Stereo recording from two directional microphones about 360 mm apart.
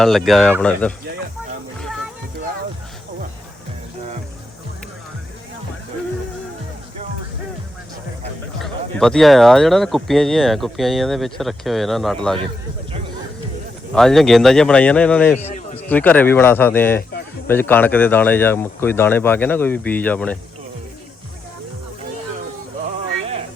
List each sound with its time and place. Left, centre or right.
0.0 s speech: centre
8.6 s speech: centre
13.9 s speech: centre
15.4 s a sound: centre
15.8 s speech: centre